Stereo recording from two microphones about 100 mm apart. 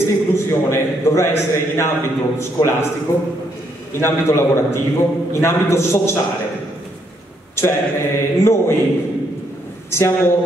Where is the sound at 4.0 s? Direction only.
30° left (ahead or behind).